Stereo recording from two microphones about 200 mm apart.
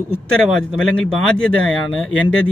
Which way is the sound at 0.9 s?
5° left (ahead or behind).